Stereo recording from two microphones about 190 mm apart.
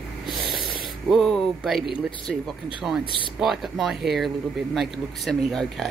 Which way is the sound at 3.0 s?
25° left (ahead or behind).